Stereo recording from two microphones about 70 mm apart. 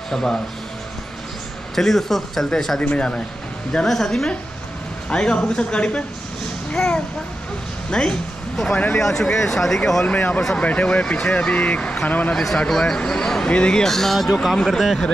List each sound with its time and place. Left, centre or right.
0.1 s speech: centre
1.8 s speech: centre
2.8 s a child's voice: centre
10.0 s speech: left
12.4 s speech: centre